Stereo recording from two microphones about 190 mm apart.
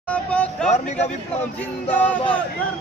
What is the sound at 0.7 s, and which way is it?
Speech, 35° left (ahead or behind).